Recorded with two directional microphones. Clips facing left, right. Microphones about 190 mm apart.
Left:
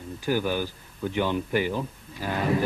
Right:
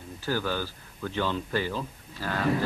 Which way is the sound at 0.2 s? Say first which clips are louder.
Left 4 dB; 15° left (ahead or behind).